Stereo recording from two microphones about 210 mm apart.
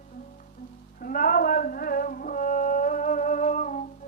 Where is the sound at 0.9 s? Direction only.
40° left (ahead or behind).